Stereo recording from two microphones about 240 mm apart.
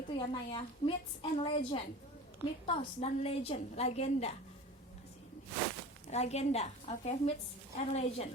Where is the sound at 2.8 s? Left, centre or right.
Left.